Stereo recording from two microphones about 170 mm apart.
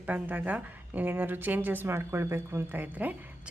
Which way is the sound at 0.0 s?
10° right (ahead or behind).